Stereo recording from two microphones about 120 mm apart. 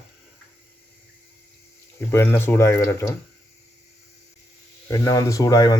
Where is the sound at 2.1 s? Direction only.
20° left (ahead or behind).